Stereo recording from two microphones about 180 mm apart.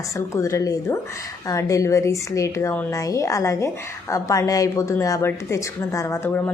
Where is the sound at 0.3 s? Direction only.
15° left (ahead or behind).